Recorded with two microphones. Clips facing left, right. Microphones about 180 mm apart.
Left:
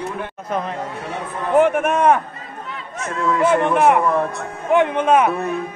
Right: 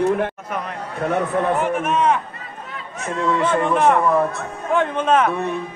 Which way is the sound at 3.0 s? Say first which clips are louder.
Left 2 dB; centre (ahead or behind).